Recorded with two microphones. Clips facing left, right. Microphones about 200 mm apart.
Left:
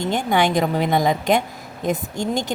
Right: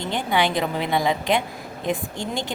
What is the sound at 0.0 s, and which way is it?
A woman's voice, 45° left (ahead or behind).